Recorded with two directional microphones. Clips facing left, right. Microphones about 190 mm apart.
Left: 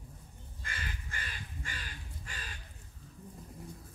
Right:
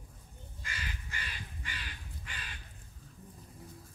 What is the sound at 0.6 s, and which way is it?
Crow, 50° left (ahead or behind).